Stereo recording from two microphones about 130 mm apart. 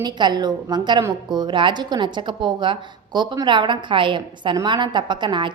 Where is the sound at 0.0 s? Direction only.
35° right (ahead or behind).